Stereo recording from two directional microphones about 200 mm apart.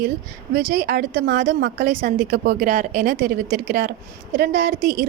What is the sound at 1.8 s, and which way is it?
A woman's voice, 45° right (ahead or behind).